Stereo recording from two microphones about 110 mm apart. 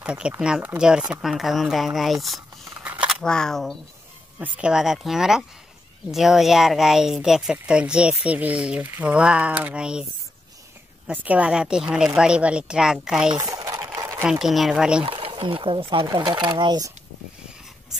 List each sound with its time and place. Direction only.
0.0 s speech: 10° right (ahead or behind)
2.8 s a sound: 10° right (ahead or behind)
3.1 s speech: 5° left (ahead or behind)
4.4 s speech: 10° right (ahead or behind)
11.1 s speech: 10° right (ahead or behind)
13.5 s typing: 35° right (ahead or behind)
13.9 s a sound: 30° right (ahead or behind)
14.2 s speech: 5° right (ahead or behind)
15.0 s speech: 55° right (ahead or behind)